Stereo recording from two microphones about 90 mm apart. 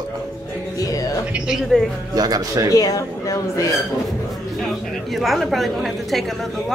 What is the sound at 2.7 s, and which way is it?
Speech, 40° left (ahead or behind).